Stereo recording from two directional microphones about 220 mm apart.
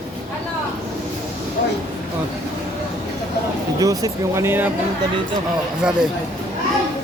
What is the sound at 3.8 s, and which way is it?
Speech, 15° right (ahead or behind).